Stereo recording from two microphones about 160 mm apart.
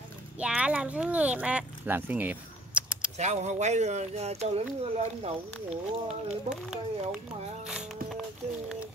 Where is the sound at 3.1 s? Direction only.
45° right (ahead or behind).